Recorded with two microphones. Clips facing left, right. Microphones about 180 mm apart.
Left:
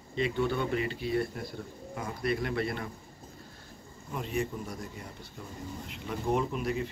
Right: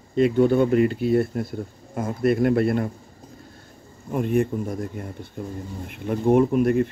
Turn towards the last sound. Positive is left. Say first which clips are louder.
# right 13 dB
turn(degrees=-55)  # may be behind; listen again after turning